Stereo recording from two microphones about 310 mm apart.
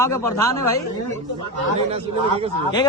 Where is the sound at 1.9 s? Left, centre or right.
Centre.